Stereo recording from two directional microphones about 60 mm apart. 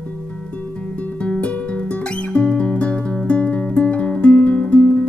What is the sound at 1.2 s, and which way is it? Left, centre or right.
Music, centre.